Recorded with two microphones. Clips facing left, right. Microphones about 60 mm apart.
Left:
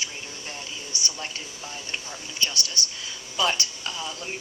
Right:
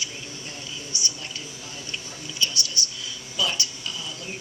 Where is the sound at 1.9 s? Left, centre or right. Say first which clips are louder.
Right 1 dB; left.